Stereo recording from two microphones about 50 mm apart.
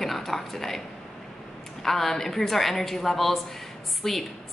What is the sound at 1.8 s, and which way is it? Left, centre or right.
A woman's voice, centre.